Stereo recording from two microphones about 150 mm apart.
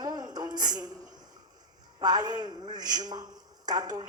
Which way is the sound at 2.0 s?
30° right (ahead or behind).